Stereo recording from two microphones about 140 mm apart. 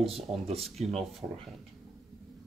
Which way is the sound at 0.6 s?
Centre (ahead or behind).